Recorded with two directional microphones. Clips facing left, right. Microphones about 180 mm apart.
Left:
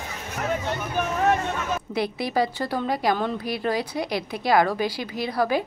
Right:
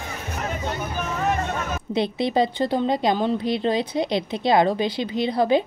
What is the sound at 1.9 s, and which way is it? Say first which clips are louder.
A woman's voice: right 6 dB; 25° right (ahead or behind).